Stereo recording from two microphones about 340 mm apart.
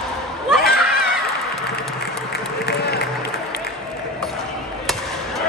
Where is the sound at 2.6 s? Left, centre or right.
Left.